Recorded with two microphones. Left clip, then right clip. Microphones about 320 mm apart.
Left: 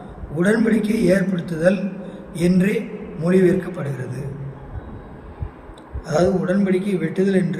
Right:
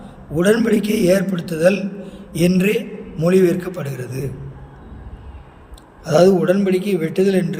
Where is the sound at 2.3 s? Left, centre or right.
Right.